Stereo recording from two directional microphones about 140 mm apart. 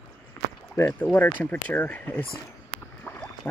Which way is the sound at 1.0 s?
10° left (ahead or behind).